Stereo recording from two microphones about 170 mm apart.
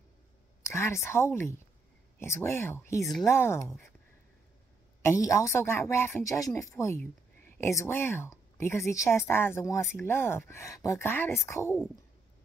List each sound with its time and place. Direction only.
0.7 s speech: 15° left (ahead or behind)
5.0 s speech: 20° left (ahead or behind)